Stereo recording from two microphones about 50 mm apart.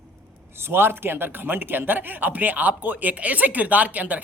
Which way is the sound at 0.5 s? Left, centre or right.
Right.